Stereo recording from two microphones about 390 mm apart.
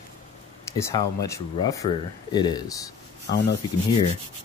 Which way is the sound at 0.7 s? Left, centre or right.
Centre.